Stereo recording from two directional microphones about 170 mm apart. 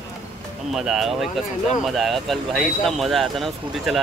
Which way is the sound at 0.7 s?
Centre (ahead or behind).